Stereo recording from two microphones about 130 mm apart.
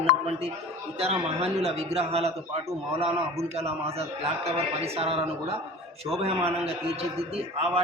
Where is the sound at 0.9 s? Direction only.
50° right (ahead or behind).